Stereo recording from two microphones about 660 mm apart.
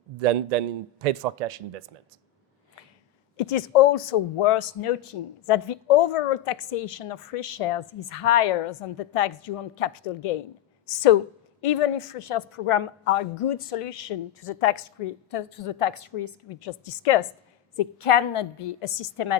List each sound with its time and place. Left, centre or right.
0.2 s speech: right
3.3 s a woman's voice: left